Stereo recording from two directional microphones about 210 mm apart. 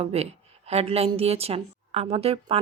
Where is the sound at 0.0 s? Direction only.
30° right (ahead or behind).